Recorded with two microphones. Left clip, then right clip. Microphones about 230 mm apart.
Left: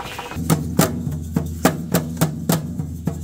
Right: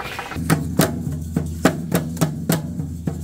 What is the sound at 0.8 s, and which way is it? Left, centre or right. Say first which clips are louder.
Music: even; left.